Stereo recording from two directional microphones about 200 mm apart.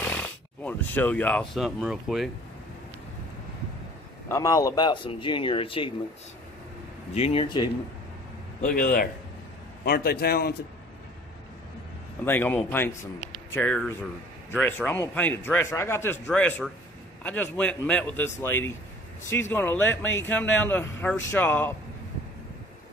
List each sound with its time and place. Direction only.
0.0 s speech: 5° left (ahead or behind)
4.3 s speech: 15° left (ahead or behind)
7.2 s speech: 30° left (ahead or behind)
8.5 s a man's voice: 40° left (ahead or behind)
12.3 s a man's voice: 10° left (ahead or behind)